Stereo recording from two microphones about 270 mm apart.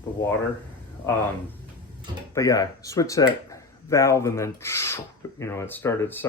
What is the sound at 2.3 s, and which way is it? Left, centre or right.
Speech, centre.